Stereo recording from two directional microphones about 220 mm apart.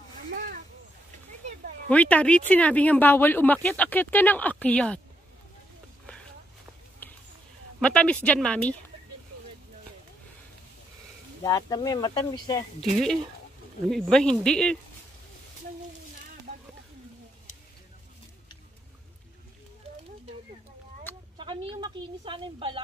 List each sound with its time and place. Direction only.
1.9 s speech: 5° left (ahead or behind)
7.0 s a sound: 10° left (ahead or behind)
7.8 s a woman's voice: 5° left (ahead or behind)
11.4 s speech: 15° left (ahead or behind)
12.9 s a woman's voice: 5° left (ahead or behind)
21.4 s a sound: 20° right (ahead or behind)